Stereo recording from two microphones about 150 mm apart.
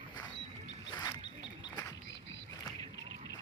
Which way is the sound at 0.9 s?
25° left (ahead or behind).